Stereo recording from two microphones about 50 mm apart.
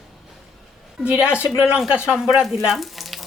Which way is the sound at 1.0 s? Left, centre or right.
Right.